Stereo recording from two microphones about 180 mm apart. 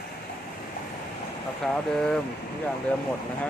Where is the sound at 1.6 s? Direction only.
5° left (ahead or behind).